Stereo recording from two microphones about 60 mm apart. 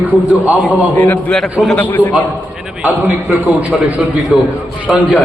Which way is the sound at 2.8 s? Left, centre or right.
Right.